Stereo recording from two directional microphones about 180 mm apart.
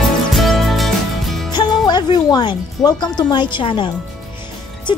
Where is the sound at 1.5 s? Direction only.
25° left (ahead or behind).